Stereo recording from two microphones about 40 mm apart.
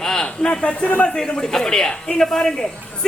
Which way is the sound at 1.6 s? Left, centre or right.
Centre.